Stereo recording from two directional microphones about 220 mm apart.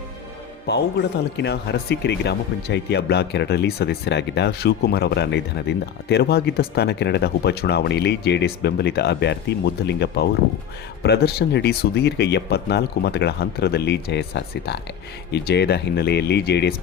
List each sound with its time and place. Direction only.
0.7 s speech: 45° left (ahead or behind)